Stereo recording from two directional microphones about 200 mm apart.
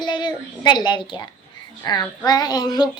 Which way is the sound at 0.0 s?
20° left (ahead or behind).